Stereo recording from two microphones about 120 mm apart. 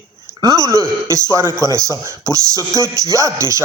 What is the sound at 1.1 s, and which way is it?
A woman's voice, 25° right (ahead or behind).